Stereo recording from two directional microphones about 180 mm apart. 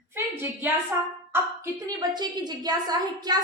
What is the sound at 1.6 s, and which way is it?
A woman's voice, 25° right (ahead or behind).